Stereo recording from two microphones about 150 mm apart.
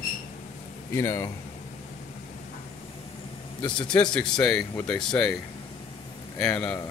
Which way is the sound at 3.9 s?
5° left (ahead or behind).